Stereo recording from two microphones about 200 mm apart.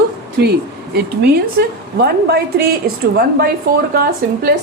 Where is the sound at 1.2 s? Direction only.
50° right (ahead or behind).